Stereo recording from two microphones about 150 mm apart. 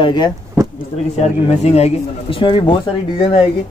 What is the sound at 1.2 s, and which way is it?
Speech, 45° left (ahead or behind).